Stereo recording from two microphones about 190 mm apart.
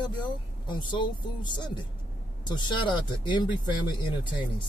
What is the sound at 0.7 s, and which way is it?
Speech, 25° left (ahead or behind).